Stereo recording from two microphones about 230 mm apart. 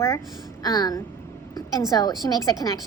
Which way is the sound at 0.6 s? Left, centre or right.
Centre.